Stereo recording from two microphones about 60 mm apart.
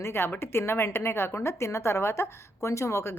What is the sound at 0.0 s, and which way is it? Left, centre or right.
A woman's voice, left.